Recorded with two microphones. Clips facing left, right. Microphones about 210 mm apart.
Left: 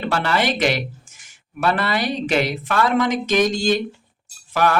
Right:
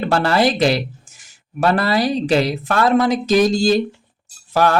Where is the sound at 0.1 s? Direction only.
35° right (ahead or behind).